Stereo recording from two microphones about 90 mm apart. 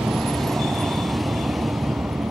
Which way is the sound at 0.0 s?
Centre (ahead or behind).